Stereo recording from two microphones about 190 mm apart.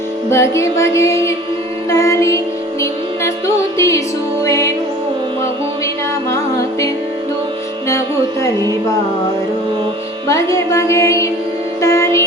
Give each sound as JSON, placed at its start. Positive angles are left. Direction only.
{"t": 0.3, "sound": "music", "side_deg": 15}
{"t": 6.3, "sound": "music", "side_deg": 15}
{"t": 10.2, "sound": "music", "side_deg": 15}